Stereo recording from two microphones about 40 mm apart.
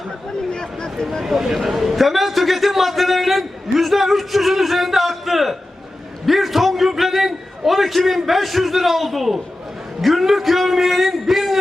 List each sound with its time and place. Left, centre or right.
0.5 s speech: centre
1.2 s a man's voice: centre